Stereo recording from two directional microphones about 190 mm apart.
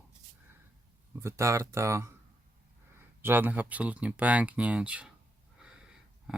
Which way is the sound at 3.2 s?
10° right (ahead or behind).